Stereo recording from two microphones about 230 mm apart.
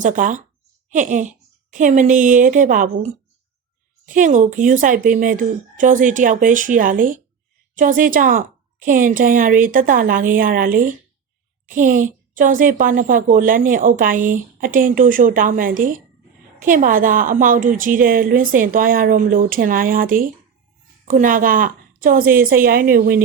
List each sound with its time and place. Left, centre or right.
0.0 s a woman's voice: right